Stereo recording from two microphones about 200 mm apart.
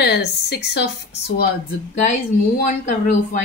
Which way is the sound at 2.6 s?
40° left (ahead or behind).